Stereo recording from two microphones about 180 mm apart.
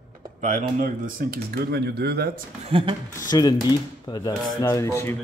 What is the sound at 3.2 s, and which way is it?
Speech, 20° left (ahead or behind).